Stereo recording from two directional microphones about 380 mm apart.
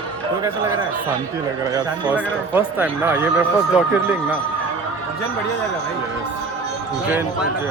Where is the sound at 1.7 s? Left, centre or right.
Centre.